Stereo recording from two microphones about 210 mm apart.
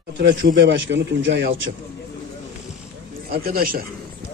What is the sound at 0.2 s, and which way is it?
A man's voice, 55° right (ahead or behind).